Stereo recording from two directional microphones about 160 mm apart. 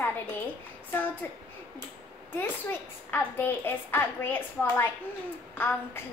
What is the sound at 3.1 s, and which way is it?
A child's voice, 10° left (ahead or behind).